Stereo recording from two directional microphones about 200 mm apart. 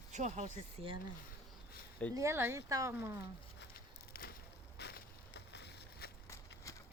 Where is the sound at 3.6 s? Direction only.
50° left (ahead or behind).